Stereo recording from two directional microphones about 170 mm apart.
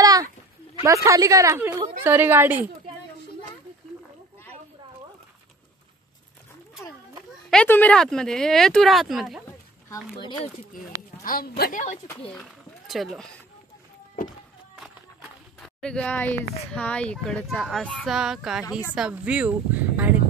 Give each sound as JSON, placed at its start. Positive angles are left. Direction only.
{"t": 0.0, "sound": "a sound", "side_deg": -20}
{"t": 0.8, "sound": "a woman's voice", "side_deg": -20}
{"t": 7.4, "sound": "speech", "side_deg": 10}
{"t": 11.2, "sound": "a woman's voice", "side_deg": 60}
{"t": 12.4, "sound": "speech", "side_deg": 0}
{"t": 15.6, "sound": "speech", "side_deg": 5}